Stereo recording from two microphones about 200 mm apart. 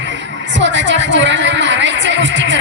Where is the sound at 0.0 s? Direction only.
65° right (ahead or behind).